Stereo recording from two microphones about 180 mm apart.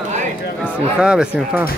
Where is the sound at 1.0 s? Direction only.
5° right (ahead or behind).